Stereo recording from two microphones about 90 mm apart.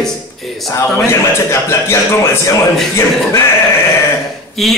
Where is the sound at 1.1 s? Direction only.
30° left (ahead or behind).